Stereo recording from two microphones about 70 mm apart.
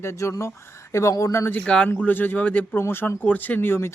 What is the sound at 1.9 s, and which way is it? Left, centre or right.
Speech, left.